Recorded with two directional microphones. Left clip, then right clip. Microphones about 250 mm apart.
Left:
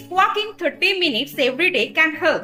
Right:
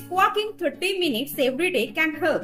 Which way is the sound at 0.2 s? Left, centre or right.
Centre.